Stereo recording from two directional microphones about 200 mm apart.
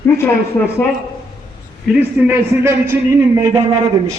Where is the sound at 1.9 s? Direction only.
10° right (ahead or behind).